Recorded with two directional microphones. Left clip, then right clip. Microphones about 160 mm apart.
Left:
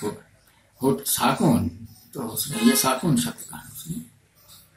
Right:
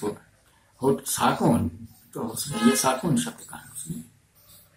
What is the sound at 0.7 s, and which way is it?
Speech, centre (ahead or behind).